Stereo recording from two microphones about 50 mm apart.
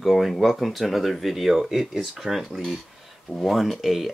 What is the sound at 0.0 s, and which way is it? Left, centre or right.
Speech, centre.